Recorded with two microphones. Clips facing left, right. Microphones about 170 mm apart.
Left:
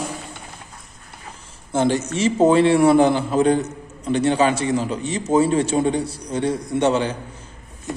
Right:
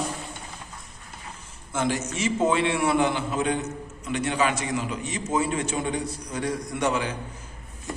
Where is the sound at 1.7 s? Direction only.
30° left (ahead or behind).